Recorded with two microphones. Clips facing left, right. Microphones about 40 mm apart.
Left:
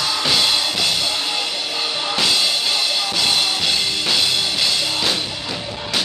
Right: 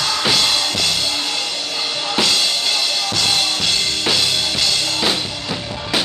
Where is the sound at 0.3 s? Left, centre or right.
Centre.